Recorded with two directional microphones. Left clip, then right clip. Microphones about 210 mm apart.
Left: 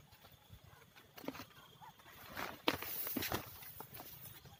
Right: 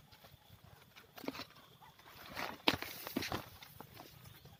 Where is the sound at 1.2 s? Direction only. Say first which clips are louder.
Right 3 dB; 50° right (ahead or behind).